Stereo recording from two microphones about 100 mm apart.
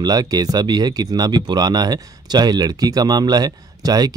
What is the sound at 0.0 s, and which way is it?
Speech, 40° right (ahead or behind).